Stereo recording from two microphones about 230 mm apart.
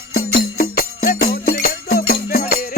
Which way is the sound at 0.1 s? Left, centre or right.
Left.